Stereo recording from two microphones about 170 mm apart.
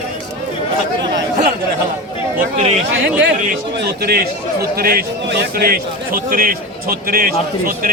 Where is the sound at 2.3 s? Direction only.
45° right (ahead or behind).